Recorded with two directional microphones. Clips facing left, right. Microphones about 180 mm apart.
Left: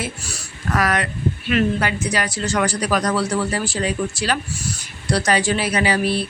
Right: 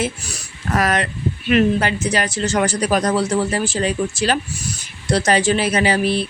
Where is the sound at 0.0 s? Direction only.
15° right (ahead or behind).